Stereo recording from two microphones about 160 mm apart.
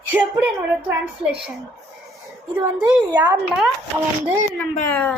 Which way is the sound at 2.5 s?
10° right (ahead or behind).